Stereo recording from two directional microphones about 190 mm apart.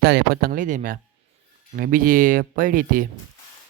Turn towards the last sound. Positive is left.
turn(degrees=-45)  # may be behind; listen again after turning